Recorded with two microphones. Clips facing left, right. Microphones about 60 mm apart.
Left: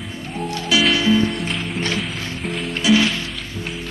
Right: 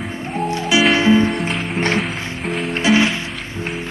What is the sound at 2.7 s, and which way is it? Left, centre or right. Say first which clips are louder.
Music: right 1 dB; right.